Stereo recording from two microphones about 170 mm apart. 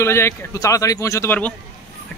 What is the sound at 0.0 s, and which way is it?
Speech, 15° left (ahead or behind).